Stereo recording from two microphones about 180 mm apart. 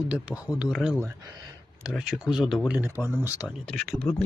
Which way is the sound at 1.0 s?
20° right (ahead or behind).